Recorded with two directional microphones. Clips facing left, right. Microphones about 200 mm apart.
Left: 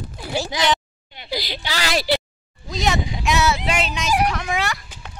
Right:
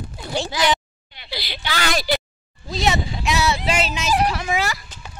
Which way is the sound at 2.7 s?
Centre (ahead or behind).